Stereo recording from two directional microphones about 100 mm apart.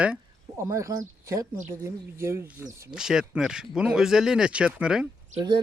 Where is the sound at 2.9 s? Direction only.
5° right (ahead or behind).